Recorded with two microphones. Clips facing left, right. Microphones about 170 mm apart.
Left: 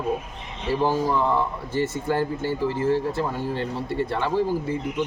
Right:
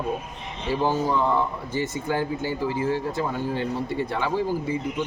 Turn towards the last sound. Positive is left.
turn(degrees=0)  # may be behind; listen again after turning